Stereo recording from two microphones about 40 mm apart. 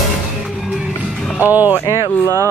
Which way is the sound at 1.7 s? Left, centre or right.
Left.